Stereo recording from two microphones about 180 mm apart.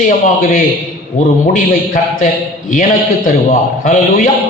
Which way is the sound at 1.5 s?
50° left (ahead or behind).